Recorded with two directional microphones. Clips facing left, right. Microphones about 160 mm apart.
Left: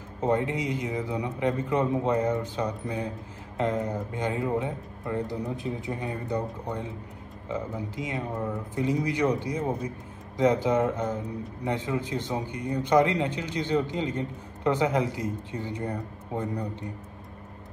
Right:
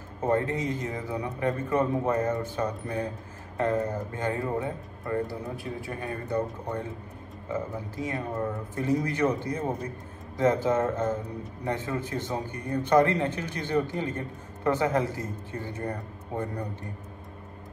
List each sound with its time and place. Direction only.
0.2 s a man's voice: 20° left (ahead or behind)